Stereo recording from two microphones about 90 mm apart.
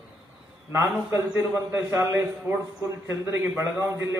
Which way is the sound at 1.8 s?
30° right (ahead or behind).